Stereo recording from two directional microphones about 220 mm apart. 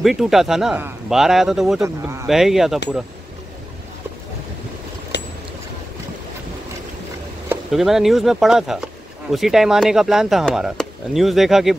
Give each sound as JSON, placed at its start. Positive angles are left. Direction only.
{"t": 0.0, "sound": "speech", "side_deg": 0}
{"t": 1.8, "sound": "speech", "side_deg": -15}
{"t": 2.2, "sound": "speech", "side_deg": 0}
{"t": 5.1, "sound": "vehicle", "side_deg": 50}
{"t": 7.4, "sound": "speech", "side_deg": 0}